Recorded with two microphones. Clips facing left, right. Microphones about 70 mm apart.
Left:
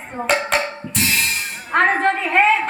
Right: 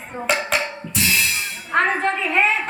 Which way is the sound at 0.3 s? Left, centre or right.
Left.